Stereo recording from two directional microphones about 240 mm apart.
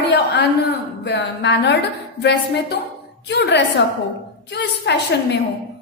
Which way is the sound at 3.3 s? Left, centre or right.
Left.